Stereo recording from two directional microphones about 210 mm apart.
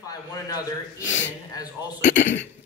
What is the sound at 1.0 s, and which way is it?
Speech, 60° left (ahead or behind).